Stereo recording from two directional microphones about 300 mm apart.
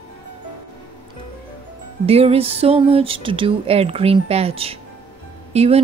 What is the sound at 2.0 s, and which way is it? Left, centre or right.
Speech, centre.